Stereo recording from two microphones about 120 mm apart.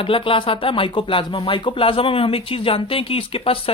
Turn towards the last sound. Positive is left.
turn(degrees=50)  # may be behind; listen again after turning